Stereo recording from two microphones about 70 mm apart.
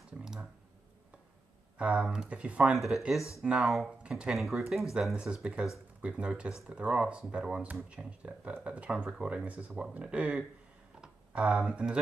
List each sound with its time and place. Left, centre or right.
0.2 s clicking: centre
1.8 s speech: centre
3.2 s speech: left
3.4 s speech: centre
4.3 s speech: centre
5.1 s speech: centre